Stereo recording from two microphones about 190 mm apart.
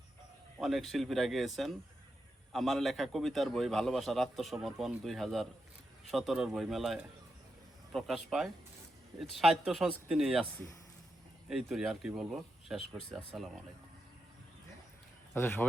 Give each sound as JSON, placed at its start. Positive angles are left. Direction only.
{"t": 0.6, "sound": "a man's voice", "side_deg": 0}
{"t": 11.4, "sound": "a man's voice", "side_deg": 0}
{"t": 15.4, "sound": "speech", "side_deg": 10}